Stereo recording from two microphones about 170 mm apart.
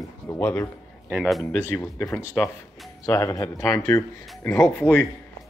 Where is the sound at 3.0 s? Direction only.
20° left (ahead or behind).